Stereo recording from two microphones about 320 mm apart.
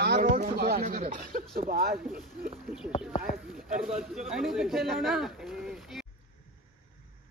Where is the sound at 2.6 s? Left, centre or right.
Centre.